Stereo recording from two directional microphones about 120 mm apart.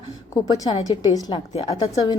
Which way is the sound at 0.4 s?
30° left (ahead or behind).